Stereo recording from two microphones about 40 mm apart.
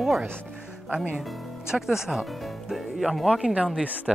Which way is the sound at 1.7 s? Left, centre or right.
Centre.